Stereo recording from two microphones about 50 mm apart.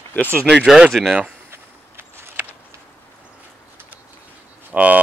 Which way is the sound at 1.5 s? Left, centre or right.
Right.